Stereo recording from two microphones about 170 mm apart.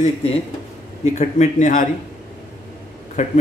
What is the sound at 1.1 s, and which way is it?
Speech, 45° left (ahead or behind).